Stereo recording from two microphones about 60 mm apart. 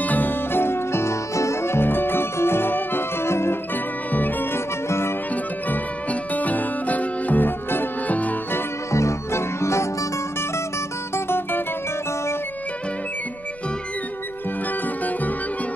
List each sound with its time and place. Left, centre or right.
0.0 s music: left
3.7 s music: left
4.8 s music: left
6.3 s music: left
8.9 s music: left
11.1 s music: left